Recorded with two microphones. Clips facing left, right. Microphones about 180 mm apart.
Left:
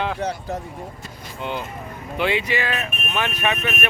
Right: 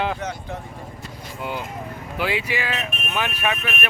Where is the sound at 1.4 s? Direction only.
5° right (ahead or behind).